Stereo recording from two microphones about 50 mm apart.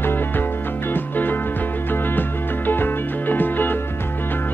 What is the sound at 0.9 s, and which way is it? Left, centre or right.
Music, left.